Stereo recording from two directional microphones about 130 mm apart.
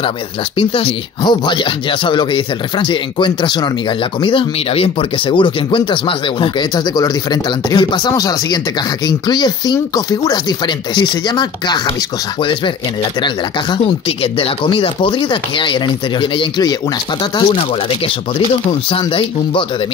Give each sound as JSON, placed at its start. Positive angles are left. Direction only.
{"t": 0.6, "sound": "speech", "side_deg": 45}